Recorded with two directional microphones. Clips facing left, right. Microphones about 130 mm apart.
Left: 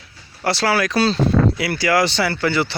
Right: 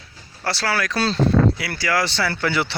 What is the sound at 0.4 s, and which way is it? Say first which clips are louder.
Speech: left 5 dB; 20° left (ahead or behind).